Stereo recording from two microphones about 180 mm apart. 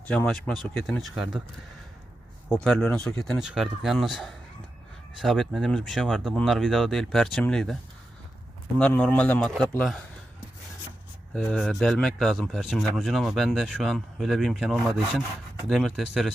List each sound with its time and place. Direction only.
0.1 s speech: 5° left (ahead or behind)
2.6 s speech: 5° left (ahead or behind)
8.8 s speech: 10° left (ahead or behind)
11.3 s speech: 5° left (ahead or behind)